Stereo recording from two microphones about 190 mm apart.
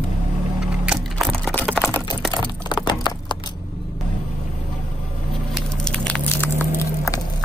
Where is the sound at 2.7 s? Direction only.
25° left (ahead or behind).